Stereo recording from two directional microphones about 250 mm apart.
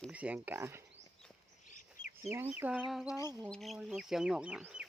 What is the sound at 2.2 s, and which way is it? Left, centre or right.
Speech, centre.